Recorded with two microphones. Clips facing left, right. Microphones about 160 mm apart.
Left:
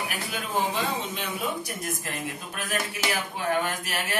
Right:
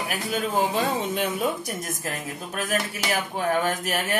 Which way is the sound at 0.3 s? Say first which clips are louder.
Right 5 dB; 45° right (ahead or behind).